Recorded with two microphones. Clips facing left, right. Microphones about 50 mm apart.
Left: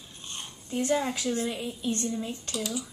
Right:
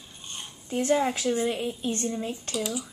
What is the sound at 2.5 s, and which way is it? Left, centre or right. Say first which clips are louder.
Speech: right 2 dB; centre.